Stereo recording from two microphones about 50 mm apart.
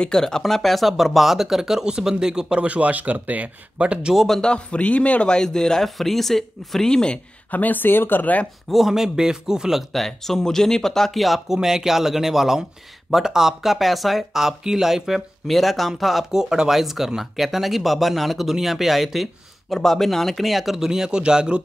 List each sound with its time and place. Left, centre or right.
0.0 s speech: centre
2.6 s speech: right
4.1 s speech: centre
4.4 s speech: centre
6.9 s speech: centre
7.5 s speech: left
8.6 s a man's voice: centre
9.9 s speech: centre